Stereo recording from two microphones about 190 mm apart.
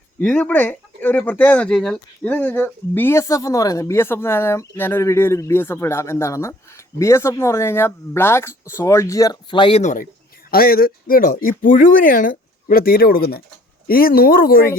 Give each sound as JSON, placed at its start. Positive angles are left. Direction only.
{"t": 0.2, "sound": "speech", "side_deg": 5}
{"t": 10.5, "sound": "speech", "side_deg": 50}